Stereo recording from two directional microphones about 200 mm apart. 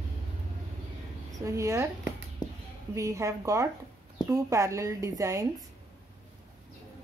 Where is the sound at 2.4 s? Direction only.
20° left (ahead or behind).